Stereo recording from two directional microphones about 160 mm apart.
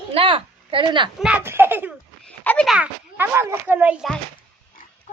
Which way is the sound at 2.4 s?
10° left (ahead or behind).